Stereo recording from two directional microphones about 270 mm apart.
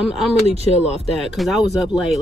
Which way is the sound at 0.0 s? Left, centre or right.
Centre.